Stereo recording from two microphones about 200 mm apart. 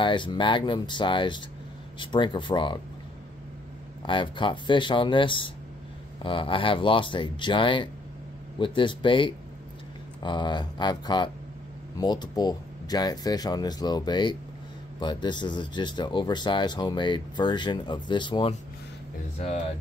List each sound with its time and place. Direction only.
0.0 s speech: 25° left (ahead or behind)
4.0 s speech: 25° left (ahead or behind)